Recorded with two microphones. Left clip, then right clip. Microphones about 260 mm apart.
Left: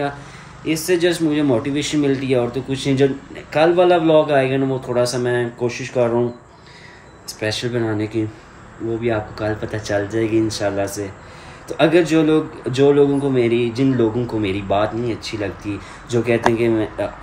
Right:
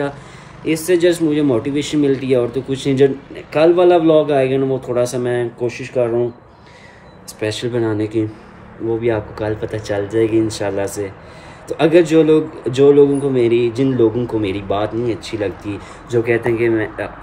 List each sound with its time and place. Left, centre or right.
0.7 s a man's voice: centre
7.3 s a man's voice: centre
9.4 s a man's voice: centre